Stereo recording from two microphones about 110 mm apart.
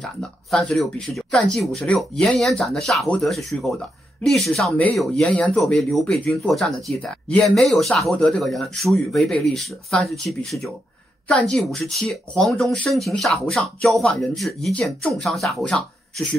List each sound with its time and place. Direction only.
0.0 s speech: 5° left (ahead or behind)